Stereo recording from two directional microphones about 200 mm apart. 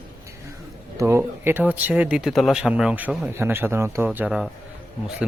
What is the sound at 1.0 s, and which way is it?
A man's voice, 15° right (ahead or behind).